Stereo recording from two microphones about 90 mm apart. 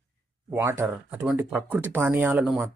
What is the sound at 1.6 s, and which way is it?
Speech, 15° right (ahead or behind).